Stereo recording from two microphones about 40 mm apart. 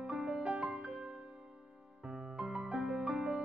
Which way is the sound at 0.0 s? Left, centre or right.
Centre.